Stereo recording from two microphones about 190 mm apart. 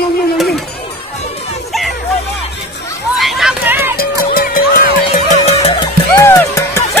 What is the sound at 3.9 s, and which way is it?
Music, 50° left (ahead or behind).